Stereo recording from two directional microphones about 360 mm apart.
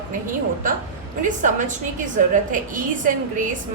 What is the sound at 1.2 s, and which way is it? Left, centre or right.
A woman's voice, right.